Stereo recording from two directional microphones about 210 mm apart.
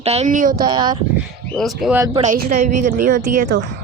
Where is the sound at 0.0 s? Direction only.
30° right (ahead or behind).